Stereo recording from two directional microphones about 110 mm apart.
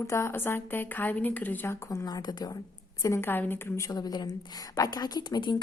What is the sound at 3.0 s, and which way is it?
Speech, 25° left (ahead or behind).